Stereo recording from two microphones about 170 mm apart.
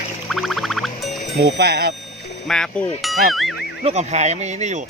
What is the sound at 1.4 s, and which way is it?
Speech, 70° right (ahead or behind).